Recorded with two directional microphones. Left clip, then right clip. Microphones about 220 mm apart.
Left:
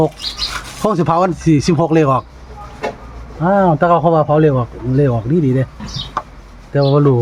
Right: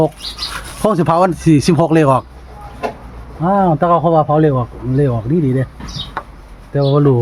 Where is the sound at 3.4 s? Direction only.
Centre (ahead or behind).